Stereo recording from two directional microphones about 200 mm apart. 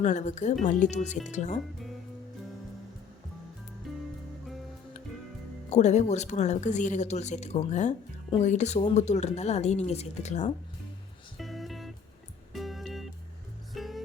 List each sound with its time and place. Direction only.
0.0 s speech: 35° left (ahead or behind)
3.9 s music: centre (ahead or behind)
5.7 s speech: 35° left (ahead or behind)
11.3 s music: centre (ahead or behind)